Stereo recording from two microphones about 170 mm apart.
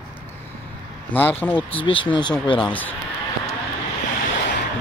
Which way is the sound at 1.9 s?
30° left (ahead or behind).